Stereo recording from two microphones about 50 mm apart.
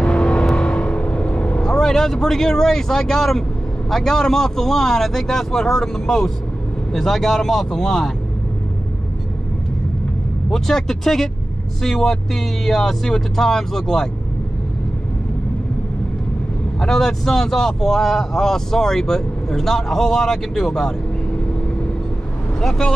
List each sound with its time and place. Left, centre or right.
0.0 s vehicle: centre
3.9 s speech: centre
10.5 s speech: centre
16.8 s speech: centre
22.6 s speech: centre